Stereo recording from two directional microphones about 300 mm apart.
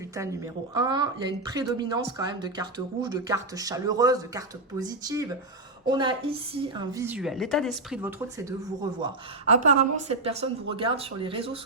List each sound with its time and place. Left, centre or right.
0.2 s speech: centre
9.5 s speech: right